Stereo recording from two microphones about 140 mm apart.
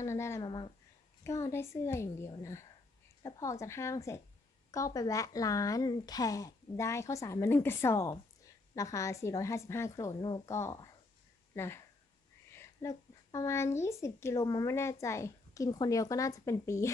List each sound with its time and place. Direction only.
0.0 s speech: 20° left (ahead or behind)
0.5 s speech: 35° left (ahead or behind)
1.2 s speech: 20° left (ahead or behind)